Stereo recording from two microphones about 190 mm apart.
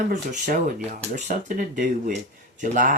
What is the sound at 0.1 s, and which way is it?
Speech, 45° right (ahead or behind).